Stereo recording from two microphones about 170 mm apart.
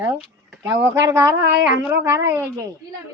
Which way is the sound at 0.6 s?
90° right.